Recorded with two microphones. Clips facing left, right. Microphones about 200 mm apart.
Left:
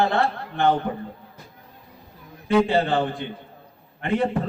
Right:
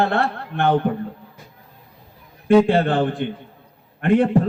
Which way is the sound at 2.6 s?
55° right (ahead or behind).